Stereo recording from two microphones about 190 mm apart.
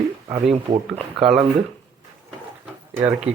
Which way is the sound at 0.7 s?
30° right (ahead or behind).